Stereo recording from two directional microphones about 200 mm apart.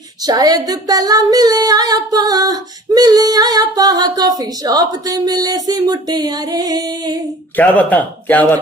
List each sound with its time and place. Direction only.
0.2 s female singing: 20° right (ahead or behind)
7.5 s a man's voice: 10° left (ahead or behind)